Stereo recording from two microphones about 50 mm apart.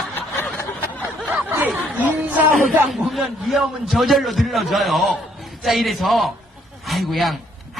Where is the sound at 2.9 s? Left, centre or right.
Centre.